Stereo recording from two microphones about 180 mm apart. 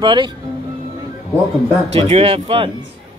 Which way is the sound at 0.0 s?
25° right (ahead or behind).